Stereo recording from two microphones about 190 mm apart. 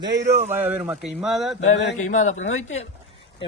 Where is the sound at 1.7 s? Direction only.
65° left (ahead or behind).